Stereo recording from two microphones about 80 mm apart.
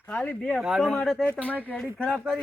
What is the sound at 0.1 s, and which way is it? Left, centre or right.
Speech, centre.